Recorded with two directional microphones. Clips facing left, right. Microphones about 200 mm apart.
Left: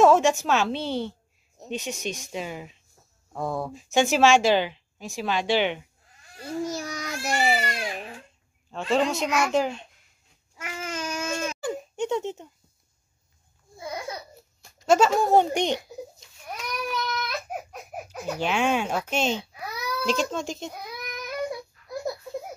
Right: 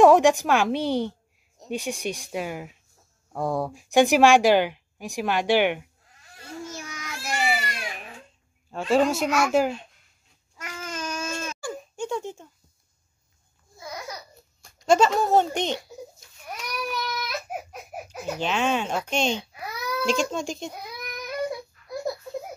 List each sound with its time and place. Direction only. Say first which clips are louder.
0.0 s speech: right 3 dB; 15° right (ahead or behind)
6.6 s babbling: left 7 dB; 35° left (ahead or behind)
8.7 s speech: right 3 dB; 10° right (ahead or behind)
10.6 s baby cry: left 1 dB; 20° left (ahead or behind)
13.7 s babbling: left 3 dB; 25° left (ahead or behind)
14.6 s speech: even; 5° left (ahead or behind)
16.5 s baby cry: left 1 dB; 10° right (ahead or behind)
18.4 s a child's voice: left 1 dB; 10° left (ahead or behind)